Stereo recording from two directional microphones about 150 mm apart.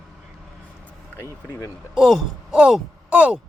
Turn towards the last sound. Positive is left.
turn(degrees=-5)  # may be behind; listen again after turning